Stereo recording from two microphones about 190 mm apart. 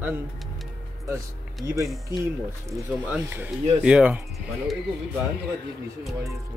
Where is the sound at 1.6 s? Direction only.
15° right (ahead or behind).